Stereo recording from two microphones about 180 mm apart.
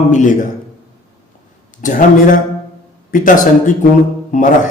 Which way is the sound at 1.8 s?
45° left (ahead or behind).